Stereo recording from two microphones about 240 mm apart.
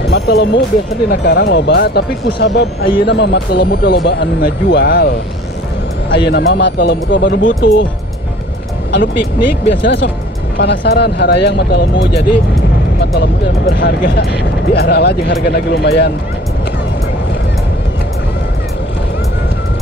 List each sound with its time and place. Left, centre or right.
0.1 s speech: left
8.9 s speech: left
10.6 s speech: left
13.7 s speech: left